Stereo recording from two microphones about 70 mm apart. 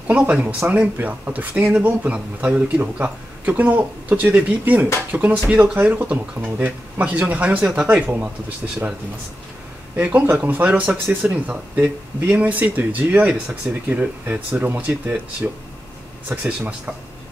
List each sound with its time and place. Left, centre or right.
0.1 s a man's voice: centre
9.9 s a man's voice: right
13.8 s a man's voice: right